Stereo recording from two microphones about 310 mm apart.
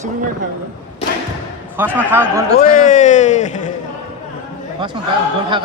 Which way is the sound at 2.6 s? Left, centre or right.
Left.